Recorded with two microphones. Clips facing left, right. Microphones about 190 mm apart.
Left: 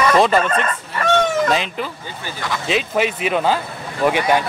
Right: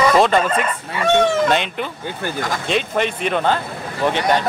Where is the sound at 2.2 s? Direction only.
45° right (ahead or behind).